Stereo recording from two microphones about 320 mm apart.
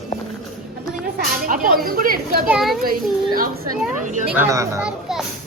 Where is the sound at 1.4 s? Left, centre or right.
Right.